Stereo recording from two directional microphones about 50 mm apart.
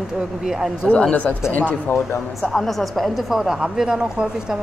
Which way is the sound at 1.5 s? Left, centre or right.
Left.